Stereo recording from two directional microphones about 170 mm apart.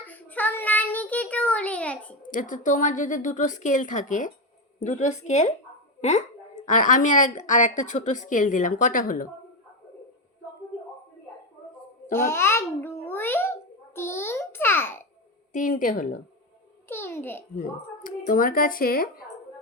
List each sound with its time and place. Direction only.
0.0 s child singing: 10° left (ahead or behind)
2.2 s a woman's voice: 50° left (ahead or behind)
12.1 s babbling: 15° left (ahead or behind)
15.5 s a woman's voice: 55° left (ahead or behind)
16.9 s babbling: 15° left (ahead or behind)
17.6 s speech: 55° left (ahead or behind)